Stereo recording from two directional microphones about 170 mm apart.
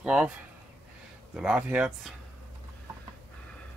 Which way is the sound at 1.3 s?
5° right (ahead or behind).